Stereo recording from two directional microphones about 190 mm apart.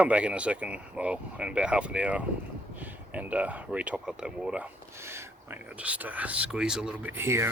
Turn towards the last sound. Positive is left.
turn(degrees=-15)  # may be behind; listen again after turning